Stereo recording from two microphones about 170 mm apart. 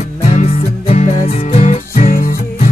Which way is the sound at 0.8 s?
40° left (ahead or behind).